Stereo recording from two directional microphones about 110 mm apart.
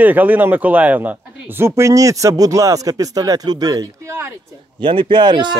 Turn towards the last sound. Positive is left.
turn(degrees=-45)  # may be behind; listen again after turning